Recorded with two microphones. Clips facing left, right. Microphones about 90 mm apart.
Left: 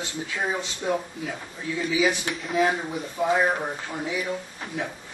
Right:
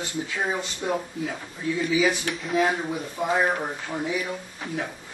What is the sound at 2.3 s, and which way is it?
Speech, centre (ahead or behind).